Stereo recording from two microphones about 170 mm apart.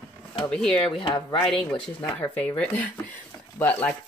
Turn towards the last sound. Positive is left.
turn(degrees=10)  # may be behind; listen again after turning